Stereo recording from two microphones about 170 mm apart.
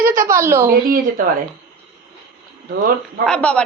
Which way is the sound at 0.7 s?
55° right (ahead or behind).